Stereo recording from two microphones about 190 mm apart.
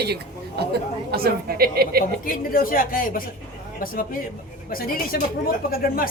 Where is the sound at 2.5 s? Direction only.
50° left (ahead or behind).